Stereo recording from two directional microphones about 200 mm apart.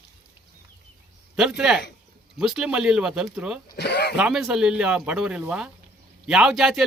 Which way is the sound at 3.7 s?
55° left (ahead or behind).